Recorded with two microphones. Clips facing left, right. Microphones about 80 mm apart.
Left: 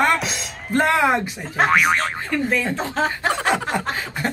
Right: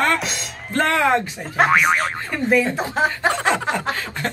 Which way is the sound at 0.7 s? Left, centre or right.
Centre.